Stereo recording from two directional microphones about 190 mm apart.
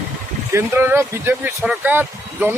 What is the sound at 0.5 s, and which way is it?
Speech, 10° right (ahead or behind).